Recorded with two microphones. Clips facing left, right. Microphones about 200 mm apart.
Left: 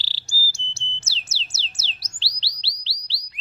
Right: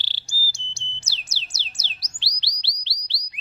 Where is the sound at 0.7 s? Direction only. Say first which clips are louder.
Left 2 dB; 15° right (ahead or behind).